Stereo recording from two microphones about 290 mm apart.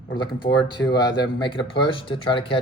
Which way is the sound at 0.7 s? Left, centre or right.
Centre.